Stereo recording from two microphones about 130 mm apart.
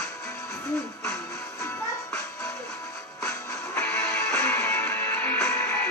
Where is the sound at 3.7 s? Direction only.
20° left (ahead or behind).